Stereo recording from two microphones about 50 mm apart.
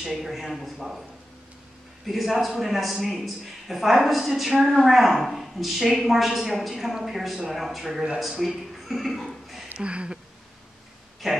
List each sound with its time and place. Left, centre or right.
0.0 s a man's voice: centre
2.0 s a man's voice: centre
9.8 s a sound: right
11.2 s a man's voice: centre